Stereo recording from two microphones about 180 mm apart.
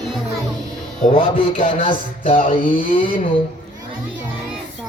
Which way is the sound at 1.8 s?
30° left (ahead or behind).